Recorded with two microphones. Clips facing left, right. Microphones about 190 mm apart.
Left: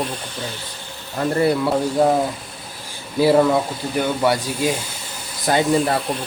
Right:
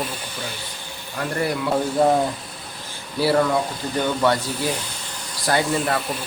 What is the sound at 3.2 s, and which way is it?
A man's voice, 15° left (ahead or behind).